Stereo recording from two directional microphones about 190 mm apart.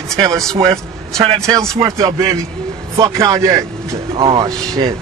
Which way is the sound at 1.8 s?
15° right (ahead or behind).